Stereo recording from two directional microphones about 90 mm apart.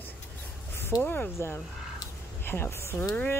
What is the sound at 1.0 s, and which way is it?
Speech, 15° left (ahead or behind).